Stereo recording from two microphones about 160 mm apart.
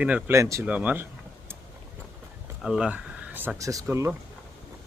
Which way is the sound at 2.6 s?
5° right (ahead or behind).